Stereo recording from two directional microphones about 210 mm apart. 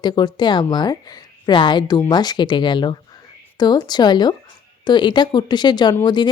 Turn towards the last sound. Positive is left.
turn(degrees=20)  # may be behind; listen again after turning